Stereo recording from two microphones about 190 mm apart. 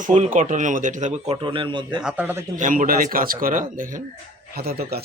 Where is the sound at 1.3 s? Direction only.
25° right (ahead or behind).